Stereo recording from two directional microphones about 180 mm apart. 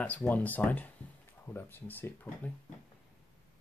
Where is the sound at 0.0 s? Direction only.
5° left (ahead or behind).